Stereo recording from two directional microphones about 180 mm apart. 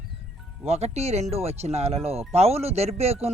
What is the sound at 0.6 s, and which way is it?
Speech, 35° right (ahead or behind).